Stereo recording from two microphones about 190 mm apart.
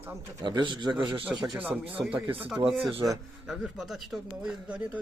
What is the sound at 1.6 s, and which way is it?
Speech, 10° right (ahead or behind).